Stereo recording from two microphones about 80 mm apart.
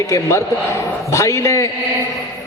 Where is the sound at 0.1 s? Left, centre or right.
Left.